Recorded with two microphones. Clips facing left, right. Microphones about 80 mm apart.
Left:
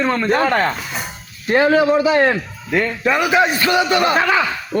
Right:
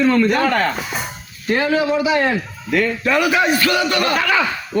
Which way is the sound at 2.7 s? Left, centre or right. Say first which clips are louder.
Even; left.